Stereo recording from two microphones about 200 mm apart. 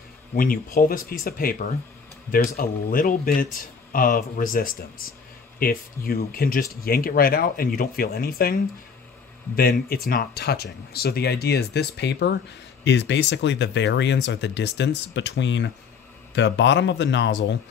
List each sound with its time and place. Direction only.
0.3 s speech: 45° left (ahead or behind)
9.6 s speech: 50° left (ahead or behind)